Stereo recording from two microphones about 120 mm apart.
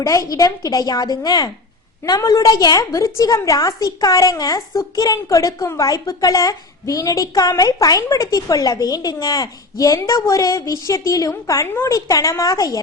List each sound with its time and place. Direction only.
0.0 s a woman's voice: 30° left (ahead or behind)